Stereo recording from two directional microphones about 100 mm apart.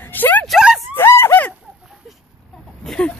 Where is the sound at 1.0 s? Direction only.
25° left (ahead or behind).